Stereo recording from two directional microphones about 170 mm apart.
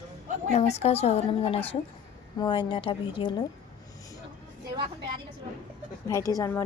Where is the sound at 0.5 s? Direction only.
40° left (ahead or behind).